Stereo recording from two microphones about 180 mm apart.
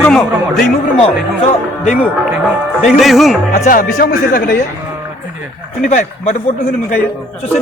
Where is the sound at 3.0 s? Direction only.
Centre (ahead or behind).